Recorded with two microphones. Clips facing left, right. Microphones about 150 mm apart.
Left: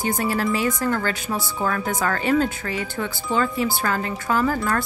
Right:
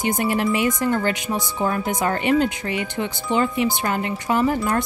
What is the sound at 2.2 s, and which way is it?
Speech, 40° left (ahead or behind).